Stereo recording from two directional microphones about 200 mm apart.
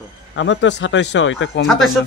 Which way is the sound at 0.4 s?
65° left (ahead or behind).